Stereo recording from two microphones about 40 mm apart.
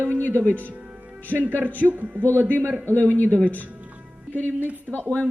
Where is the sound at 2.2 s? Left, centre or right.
Right.